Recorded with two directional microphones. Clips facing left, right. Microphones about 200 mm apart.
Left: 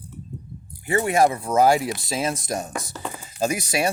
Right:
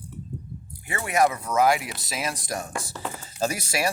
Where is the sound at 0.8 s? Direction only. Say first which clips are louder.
Left 4 dB; 30° left (ahead or behind).